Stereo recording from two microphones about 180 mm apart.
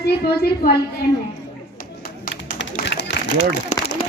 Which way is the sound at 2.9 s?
75° left (ahead or behind).